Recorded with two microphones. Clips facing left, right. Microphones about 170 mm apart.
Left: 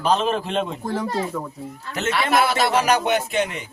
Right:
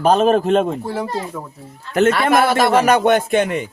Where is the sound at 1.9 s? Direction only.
55° right (ahead or behind).